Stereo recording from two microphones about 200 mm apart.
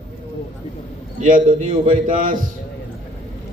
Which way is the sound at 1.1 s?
40° right (ahead or behind).